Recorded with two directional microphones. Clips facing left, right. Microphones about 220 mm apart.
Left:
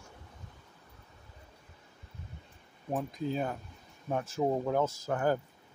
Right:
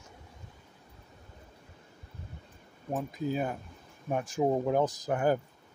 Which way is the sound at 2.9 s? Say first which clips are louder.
Right 1 dB; 5° right (ahead or behind).